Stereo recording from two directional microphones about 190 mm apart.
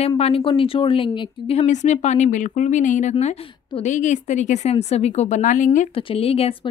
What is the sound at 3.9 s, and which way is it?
A woman's voice, 40° left (ahead or behind).